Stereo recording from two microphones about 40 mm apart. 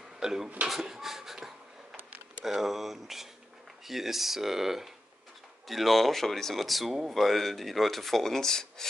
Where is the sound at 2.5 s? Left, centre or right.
Centre.